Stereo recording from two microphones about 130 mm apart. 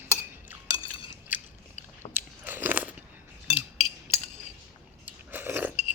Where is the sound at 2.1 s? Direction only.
15° right (ahead or behind).